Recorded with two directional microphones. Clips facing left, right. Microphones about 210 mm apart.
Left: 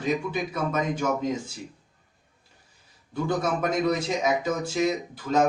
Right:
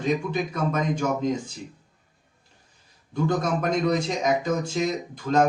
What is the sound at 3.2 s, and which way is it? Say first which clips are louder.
Speech: right 1 dB; 5° left (ahead or behind).